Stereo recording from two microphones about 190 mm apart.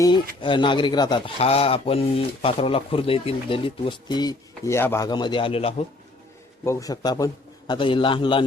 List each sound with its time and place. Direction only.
0.4 s speech: 25° left (ahead or behind)
6.7 s speech: 15° left (ahead or behind)